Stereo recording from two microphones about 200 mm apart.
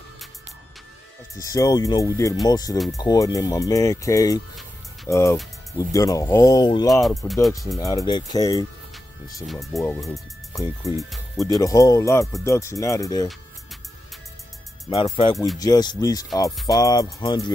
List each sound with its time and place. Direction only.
1.4 s speech: 15° left (ahead or behind)
6.9 s speech: centre (ahead or behind)
7.8 s speech: 15° left (ahead or behind)
9.9 s speech: centre (ahead or behind)
11.3 s speech: 15° left (ahead or behind)
14.9 s speech: 25° left (ahead or behind)